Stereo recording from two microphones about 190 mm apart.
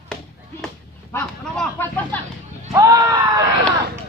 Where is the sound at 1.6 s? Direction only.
10° left (ahead or behind).